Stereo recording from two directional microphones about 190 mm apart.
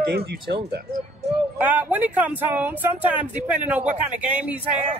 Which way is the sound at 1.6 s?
10° right (ahead or behind).